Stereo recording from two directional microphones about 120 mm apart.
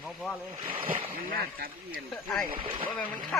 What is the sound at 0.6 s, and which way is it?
Speech, 50° right (ahead or behind).